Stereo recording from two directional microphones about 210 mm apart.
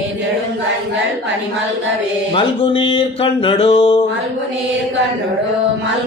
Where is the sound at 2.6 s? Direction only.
25° left (ahead or behind).